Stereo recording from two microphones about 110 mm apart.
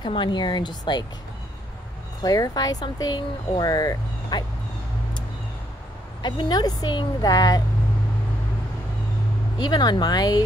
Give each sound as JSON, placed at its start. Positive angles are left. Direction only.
{"t": 0.0, "sound": "speech", "side_deg": 45}
{"t": 2.2, "sound": "speech", "side_deg": 35}
{"t": 6.2, "sound": "speech", "side_deg": 40}
{"t": 9.6, "sound": "speech", "side_deg": 40}